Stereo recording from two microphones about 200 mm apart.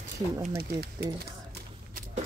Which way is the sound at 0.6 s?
50° right (ahead or behind).